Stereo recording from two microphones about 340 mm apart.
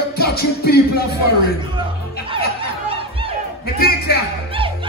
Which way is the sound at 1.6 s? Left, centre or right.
Centre.